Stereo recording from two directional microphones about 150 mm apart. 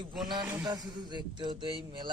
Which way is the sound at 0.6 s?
25° right (ahead or behind).